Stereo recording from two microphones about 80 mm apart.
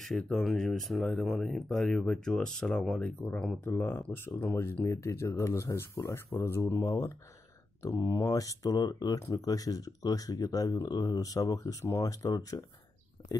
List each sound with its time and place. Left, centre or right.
0.0 s speech: centre
3.6 s speech: left
13.2 s a sound: left